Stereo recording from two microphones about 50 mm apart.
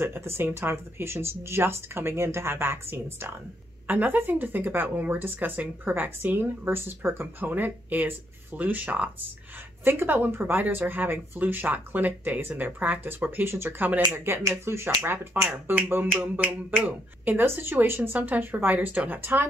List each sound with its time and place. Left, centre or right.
0.0 s speech: right
3.8 s speech: right
7.4 s speech: right
9.8 s speech: right
13.5 s speech: right
14.4 s speech: right
15.0 s speech: right
16.3 s speech: right
17.4 s speech: right